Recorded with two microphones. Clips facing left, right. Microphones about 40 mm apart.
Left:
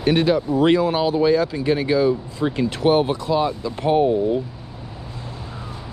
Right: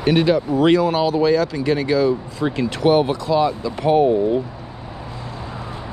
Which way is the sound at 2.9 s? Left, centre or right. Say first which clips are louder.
Right 2 dB; centre.